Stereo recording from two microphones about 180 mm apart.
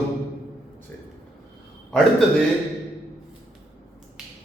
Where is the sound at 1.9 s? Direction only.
Centre (ahead or behind).